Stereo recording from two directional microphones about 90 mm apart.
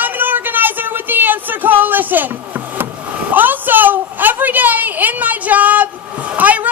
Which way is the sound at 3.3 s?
20° right (ahead or behind).